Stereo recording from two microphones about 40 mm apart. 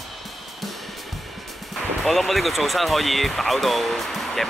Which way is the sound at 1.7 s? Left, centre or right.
Centre.